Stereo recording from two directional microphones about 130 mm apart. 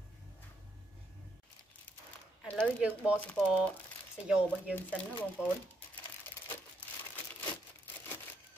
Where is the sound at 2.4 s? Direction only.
5° left (ahead or behind).